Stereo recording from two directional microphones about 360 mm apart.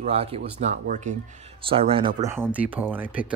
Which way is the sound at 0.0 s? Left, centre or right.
Centre.